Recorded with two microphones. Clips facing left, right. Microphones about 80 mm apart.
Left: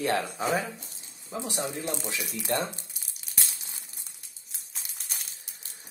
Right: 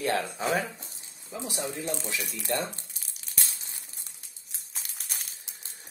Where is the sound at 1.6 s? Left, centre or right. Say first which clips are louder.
Right 1 dB; left.